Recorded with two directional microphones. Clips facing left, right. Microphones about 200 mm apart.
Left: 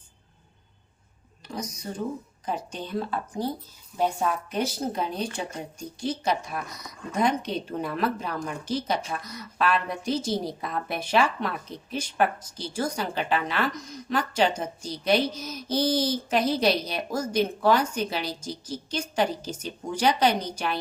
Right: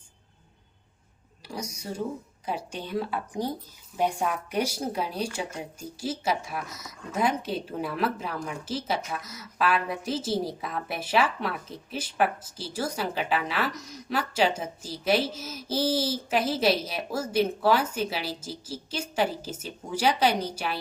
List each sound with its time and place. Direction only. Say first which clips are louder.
1.5 s a woman's voice: left 1 dB; 10° right (ahead or behind)